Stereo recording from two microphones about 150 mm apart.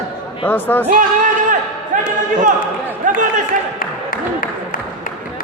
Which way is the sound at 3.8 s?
70° left (ahead or behind).